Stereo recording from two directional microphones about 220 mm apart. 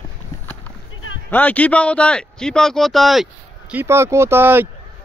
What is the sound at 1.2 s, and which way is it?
Speech, 5° left (ahead or behind).